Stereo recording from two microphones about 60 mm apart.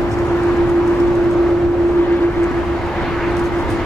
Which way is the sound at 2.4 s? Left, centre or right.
Centre.